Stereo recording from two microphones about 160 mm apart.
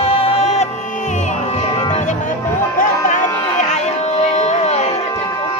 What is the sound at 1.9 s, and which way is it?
Music, 50° left (ahead or behind).